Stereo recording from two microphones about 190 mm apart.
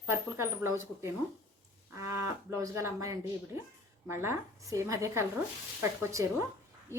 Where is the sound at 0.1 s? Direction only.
15° right (ahead or behind).